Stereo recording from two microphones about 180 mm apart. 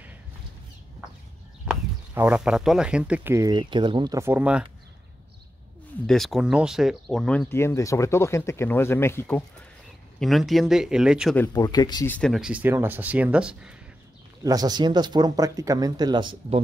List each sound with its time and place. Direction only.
1.7 s speech: 10° right (ahead or behind)
6.0 s speech: centre (ahead or behind)
10.2 s speech: centre (ahead or behind)
11.5 s speech: 20° left (ahead or behind)
12.1 s speech: centre (ahead or behind)
14.4 s speech: 20° right (ahead or behind)